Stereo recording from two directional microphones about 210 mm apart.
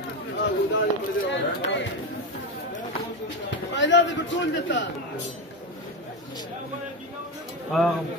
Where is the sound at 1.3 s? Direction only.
60° left (ahead or behind).